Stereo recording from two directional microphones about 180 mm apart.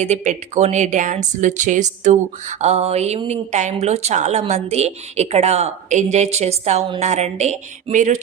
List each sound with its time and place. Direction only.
0.0 s a woman's voice: 40° right (ahead or behind)